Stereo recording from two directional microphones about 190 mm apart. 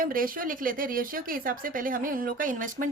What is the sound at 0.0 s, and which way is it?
Speech, 50° right (ahead or behind).